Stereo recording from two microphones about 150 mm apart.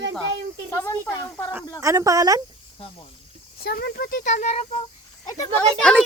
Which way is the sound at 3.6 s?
90° left.